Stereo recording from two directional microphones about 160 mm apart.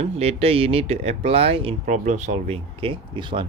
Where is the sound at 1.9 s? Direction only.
50° right (ahead or behind); by 3.5 s 30° right (ahead or behind).